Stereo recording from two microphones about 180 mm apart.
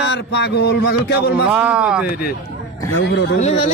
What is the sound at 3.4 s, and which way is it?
Speech, 35° left (ahead or behind).